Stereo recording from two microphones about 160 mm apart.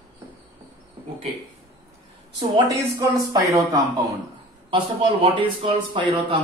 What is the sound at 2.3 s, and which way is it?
Speech, 25° right (ahead or behind).